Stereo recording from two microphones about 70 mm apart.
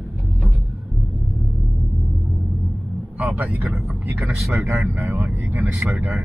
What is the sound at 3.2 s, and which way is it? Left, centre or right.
Speech, right.